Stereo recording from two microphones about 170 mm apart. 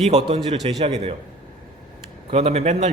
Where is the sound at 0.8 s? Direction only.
40° right (ahead or behind).